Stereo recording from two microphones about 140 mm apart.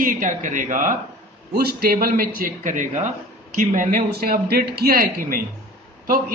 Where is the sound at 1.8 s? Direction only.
90° right.